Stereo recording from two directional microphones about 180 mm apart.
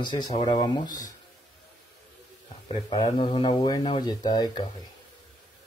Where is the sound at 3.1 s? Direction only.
25° left (ahead or behind).